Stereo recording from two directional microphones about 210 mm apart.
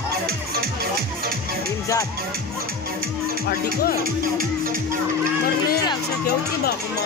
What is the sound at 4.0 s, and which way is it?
Speech, 40° right (ahead or behind).